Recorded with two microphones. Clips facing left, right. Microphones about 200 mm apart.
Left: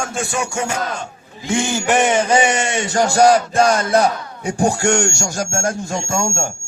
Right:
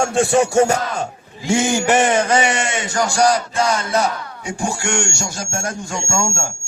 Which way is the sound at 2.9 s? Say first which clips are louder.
Left 4 dB; 45° left (ahead or behind).